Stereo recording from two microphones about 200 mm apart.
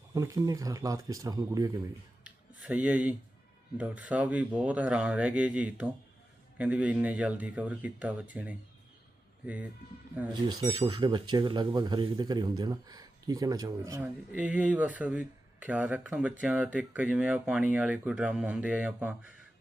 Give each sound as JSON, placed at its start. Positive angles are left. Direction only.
{"t": 0.1, "sound": "speech", "side_deg": -15}
{"t": 2.2, "sound": "a sound", "side_deg": -5}
{"t": 3.8, "sound": "speech", "side_deg": -5}
{"t": 10.5, "sound": "speech", "side_deg": -20}
{"t": 14.0, "sound": "speech", "side_deg": -5}